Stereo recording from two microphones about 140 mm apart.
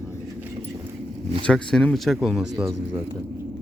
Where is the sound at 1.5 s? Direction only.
5° left (ahead or behind).